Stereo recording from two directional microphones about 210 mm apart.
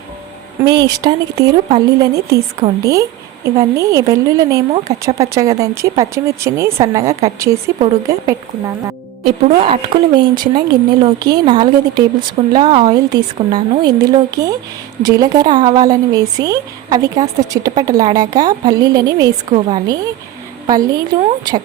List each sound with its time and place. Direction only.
0.6 s speech: 20° right (ahead or behind)
9.6 s a woman's voice: 25° right (ahead or behind)